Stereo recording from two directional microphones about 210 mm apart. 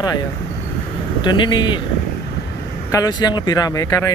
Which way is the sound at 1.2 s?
20° left (ahead or behind).